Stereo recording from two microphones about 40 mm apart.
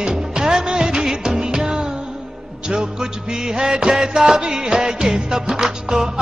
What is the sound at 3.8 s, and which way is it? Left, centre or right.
Music, centre.